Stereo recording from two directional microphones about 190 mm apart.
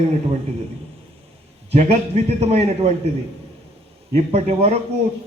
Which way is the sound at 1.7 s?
35° right (ahead or behind).